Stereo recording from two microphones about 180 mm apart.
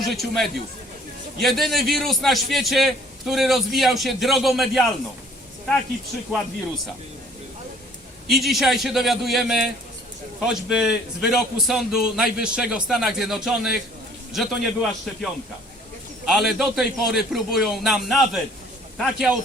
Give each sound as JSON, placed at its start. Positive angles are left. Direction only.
{"t": 0.0, "sound": "a man's voice", "side_deg": 0}
{"t": 8.3, "sound": "a man's voice", "side_deg": 0}